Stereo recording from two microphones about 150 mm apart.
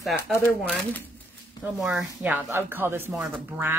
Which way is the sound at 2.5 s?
15° right (ahead or behind).